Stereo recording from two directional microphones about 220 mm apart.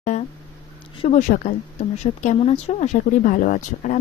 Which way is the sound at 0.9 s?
30° left (ahead or behind).